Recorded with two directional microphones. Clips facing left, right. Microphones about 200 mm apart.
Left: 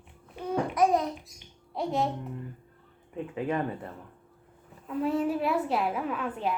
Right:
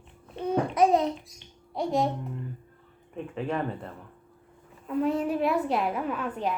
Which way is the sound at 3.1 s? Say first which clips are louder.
Left 1 dB; 15° left (ahead or behind).